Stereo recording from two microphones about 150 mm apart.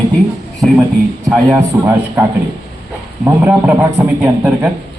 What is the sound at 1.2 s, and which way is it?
Speech, centre (ahead or behind).